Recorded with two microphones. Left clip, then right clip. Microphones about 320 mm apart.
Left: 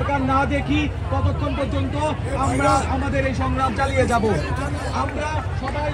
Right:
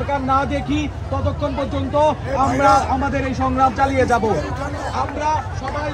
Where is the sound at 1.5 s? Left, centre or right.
Right.